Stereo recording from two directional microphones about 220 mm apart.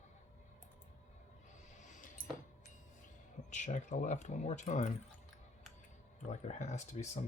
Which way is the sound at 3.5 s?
35° left (ahead or behind).